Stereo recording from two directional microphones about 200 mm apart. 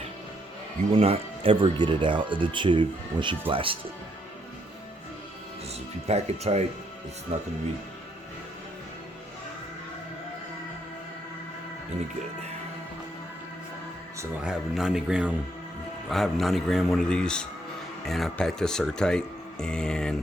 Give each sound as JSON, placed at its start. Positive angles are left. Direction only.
{"t": 0.9, "sound": "speech", "side_deg": -30}
{"t": 6.1, "sound": "speech", "side_deg": -30}
{"t": 14.4, "sound": "speech", "side_deg": -5}